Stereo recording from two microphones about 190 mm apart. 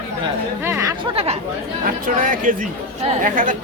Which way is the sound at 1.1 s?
30° right (ahead or behind).